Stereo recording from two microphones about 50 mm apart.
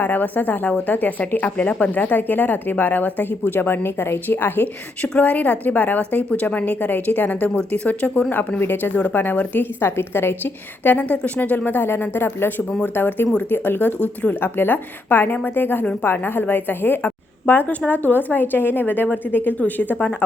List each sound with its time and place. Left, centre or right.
0.0 s a woman's voice: left
5.2 s a woman's voice: left
9.8 s a woman's voice: left